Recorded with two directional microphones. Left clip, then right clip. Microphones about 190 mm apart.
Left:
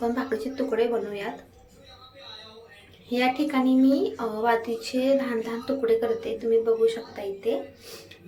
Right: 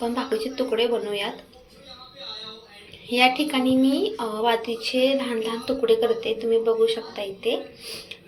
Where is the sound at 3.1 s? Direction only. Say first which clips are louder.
Right 4 dB; 15° left (ahead or behind).